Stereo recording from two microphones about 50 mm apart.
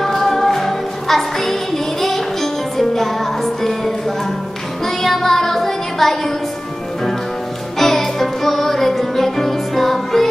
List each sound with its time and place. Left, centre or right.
0.0 s music: centre
4.8 s child singing: centre
7.8 s music: centre